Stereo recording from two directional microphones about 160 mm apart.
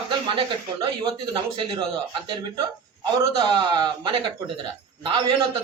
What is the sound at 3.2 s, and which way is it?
Speech, 25° right (ahead or behind).